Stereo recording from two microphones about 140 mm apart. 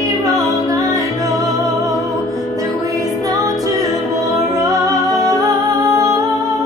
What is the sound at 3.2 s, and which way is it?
Music, 25° right (ahead or behind).